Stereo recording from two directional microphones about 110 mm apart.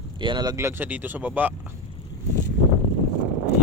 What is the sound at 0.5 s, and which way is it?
Speech, 20° right (ahead or behind).